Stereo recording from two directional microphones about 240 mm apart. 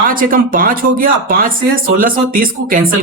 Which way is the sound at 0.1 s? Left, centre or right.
Right.